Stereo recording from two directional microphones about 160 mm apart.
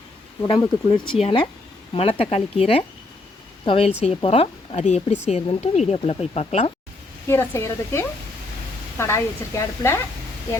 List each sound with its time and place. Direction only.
0.4 s speech: 30° left (ahead or behind)
7.3 s speech: 15° left (ahead or behind)